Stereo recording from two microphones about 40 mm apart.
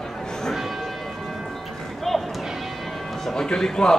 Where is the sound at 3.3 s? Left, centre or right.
Centre.